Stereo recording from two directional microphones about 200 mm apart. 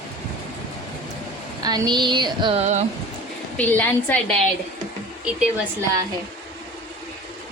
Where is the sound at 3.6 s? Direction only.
10° left (ahead or behind).